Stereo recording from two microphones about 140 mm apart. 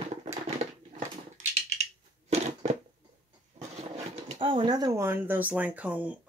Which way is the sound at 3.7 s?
50° right (ahead or behind).